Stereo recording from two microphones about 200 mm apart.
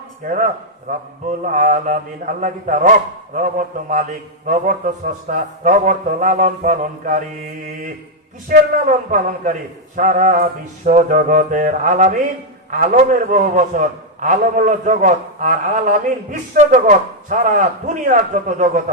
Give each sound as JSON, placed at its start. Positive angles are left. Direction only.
{"t": 0.3, "sound": "a man's voice", "side_deg": -40}
{"t": 8.4, "sound": "a man's voice", "side_deg": -40}